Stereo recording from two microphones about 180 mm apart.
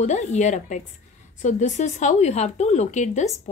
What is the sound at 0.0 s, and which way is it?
Speech, 40° left (ahead or behind).